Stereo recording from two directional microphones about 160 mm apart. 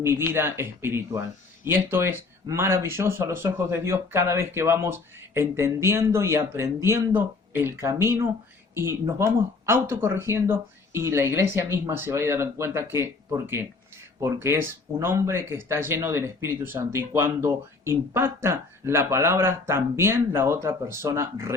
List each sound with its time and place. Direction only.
0.0 s speech: 15° right (ahead or behind)